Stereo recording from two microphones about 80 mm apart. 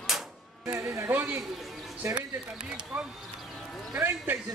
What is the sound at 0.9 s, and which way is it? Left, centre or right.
Speech, right.